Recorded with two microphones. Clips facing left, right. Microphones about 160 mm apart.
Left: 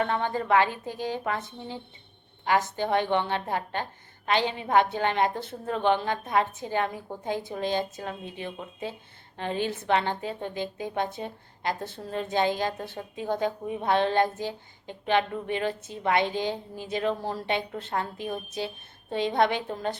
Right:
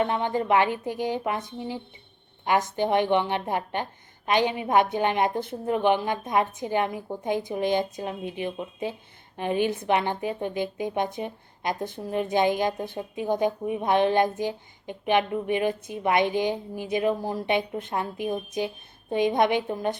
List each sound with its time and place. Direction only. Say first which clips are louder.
0.0 s a woman's voice: right 2 dB; 15° right (ahead or behind)